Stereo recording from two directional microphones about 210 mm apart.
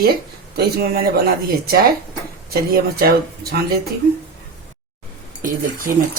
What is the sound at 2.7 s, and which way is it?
Speech, 45° right (ahead or behind).